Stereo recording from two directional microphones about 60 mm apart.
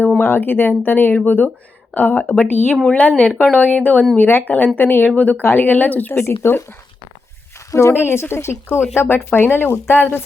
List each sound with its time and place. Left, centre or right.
0.2 s speech: left
4.2 s speech: left
6.1 s speech: left
7.7 s speech: left